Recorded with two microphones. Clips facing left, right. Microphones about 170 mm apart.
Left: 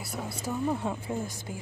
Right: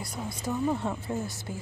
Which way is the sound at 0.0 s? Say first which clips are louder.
Right 1 dB; 10° left (ahead or behind).